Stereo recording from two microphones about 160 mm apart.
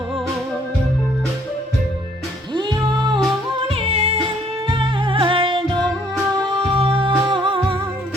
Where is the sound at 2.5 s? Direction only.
30° right (ahead or behind).